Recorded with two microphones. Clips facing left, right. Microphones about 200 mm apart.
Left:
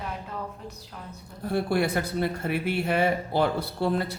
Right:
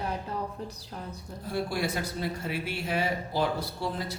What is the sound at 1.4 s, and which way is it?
Speech, 60° left (ahead or behind).